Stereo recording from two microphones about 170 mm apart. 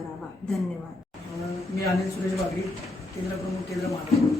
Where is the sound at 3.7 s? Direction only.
20° left (ahead or behind).